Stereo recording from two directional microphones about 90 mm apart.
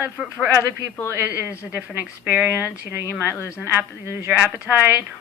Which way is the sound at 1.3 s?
15° right (ahead or behind).